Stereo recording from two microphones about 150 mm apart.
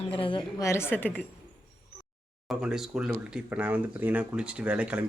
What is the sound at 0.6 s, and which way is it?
Speech, 15° left (ahead or behind).